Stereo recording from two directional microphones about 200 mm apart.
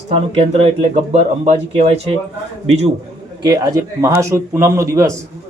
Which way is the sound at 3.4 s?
15° right (ahead or behind).